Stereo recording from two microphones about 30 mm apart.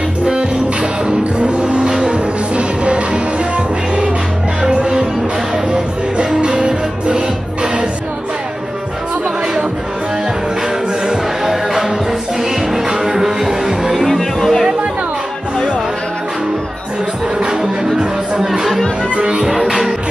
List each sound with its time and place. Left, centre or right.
0.2 s music: right
1.4 s vehicle: right
1.9 s music: right
5.7 s music: right
11.1 s music: centre
13.9 s music: centre
17.9 s music: right
19.1 s music: right
19.4 s music: centre